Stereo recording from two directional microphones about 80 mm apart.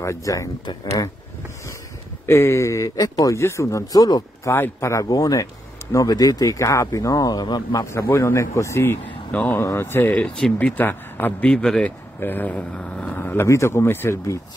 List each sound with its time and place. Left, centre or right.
0.0 s speech: left
2.2 s speech: left
4.5 s speech: left
5.0 s speech: left
7.8 s speech: left
9.0 s speech: centre
9.6 s speech: left
10.1 s speech: centre
10.6 s speech: left
11.4 s speech: centre
12.2 s speech: left
13.1 s speech: left